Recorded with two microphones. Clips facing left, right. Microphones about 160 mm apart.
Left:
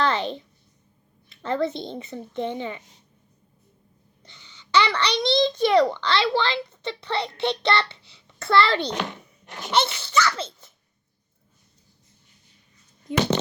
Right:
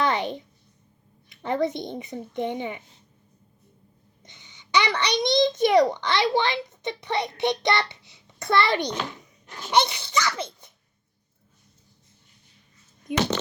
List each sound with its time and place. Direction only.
0.0 s a child's voice: 15° right (ahead or behind)
4.2 s a child's voice: 15° right (ahead or behind)
8.9 s a child's voice: 65° left (ahead or behind)
9.6 s speech: 15° right (ahead or behind)
13.1 s speech: 15° right (ahead or behind)